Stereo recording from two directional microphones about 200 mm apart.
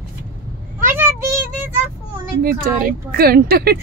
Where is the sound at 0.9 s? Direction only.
10° right (ahead or behind).